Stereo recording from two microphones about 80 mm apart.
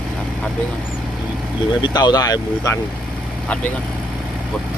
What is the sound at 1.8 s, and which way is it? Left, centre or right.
Speech, left.